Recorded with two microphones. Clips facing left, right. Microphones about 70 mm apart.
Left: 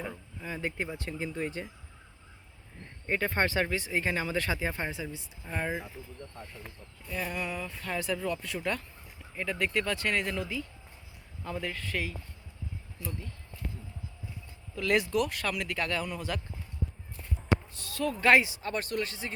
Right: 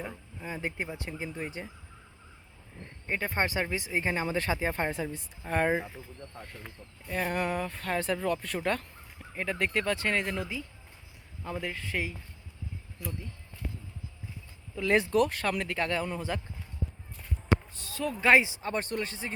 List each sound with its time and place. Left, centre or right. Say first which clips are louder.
0.0 s a sound: left 1 dB; centre
0.4 s speech: even; right
3.1 s speech: left 1 dB; centre; by 4.9 s right
5.5 s speech: right 7 dB; right
7.1 s speech: right 4 dB; right
7.3 s speech: right 5 dB; right
14.8 s speech: right 2 dB; right
17.5 s speech: right 1 dB; right